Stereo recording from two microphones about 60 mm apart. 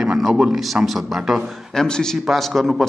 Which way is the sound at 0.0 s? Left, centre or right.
Centre.